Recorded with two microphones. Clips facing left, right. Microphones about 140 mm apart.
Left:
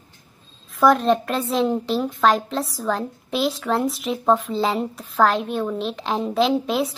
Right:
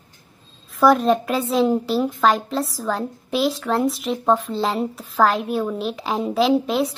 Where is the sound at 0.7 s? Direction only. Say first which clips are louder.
Right 1 dB; centre (ahead or behind).